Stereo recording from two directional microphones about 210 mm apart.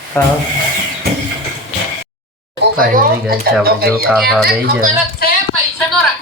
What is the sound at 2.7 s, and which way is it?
Speech, 45° right (ahead or behind).